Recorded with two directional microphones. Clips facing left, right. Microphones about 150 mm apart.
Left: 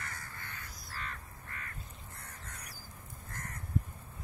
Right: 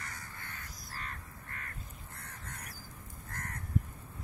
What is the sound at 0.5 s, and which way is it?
Crow, 45° right (ahead or behind).